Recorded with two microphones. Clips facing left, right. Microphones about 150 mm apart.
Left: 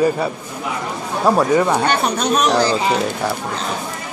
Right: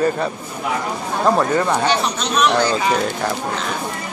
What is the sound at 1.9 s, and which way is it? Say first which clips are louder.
Speech: left 2 dB; 55° left (ahead or behind).